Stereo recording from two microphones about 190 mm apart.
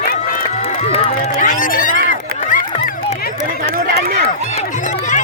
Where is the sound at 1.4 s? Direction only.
40° left (ahead or behind).